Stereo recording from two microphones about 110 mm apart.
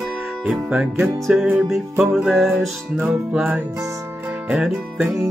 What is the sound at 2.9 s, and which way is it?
Music, 15° right (ahead or behind).